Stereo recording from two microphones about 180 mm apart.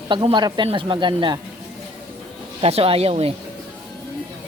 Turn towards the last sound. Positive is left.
turn(degrees=-35)  # may be behind; listen again after turning